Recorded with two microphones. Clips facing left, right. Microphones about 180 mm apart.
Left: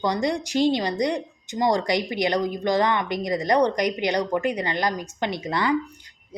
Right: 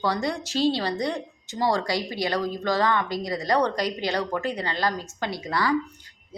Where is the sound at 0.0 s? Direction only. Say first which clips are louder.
Left 3 dB; 15° left (ahead or behind).